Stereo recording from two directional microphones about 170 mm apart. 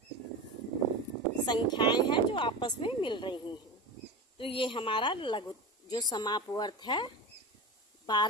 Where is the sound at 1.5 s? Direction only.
25° left (ahead or behind).